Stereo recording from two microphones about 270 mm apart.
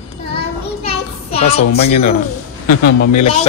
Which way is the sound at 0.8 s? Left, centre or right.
Left.